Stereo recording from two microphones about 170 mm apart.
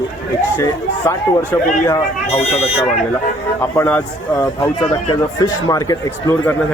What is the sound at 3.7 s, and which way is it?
Speech, 15° left (ahead or behind).